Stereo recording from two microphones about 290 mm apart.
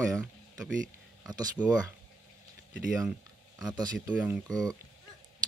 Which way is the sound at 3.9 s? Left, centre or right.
Centre.